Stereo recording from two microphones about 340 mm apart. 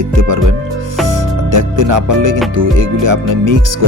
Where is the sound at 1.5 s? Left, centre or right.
Right.